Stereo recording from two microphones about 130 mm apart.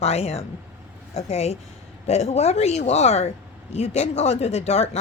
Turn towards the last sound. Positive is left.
turn(degrees=55)  # may be behind; listen again after turning